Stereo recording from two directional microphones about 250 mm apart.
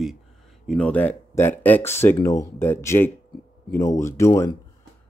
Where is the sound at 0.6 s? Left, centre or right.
Centre.